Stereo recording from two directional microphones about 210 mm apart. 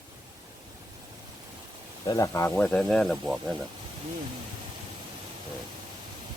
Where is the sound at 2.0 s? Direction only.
15° left (ahead or behind).